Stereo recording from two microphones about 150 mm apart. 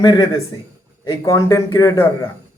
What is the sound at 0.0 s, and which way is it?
Speech, 30° left (ahead or behind).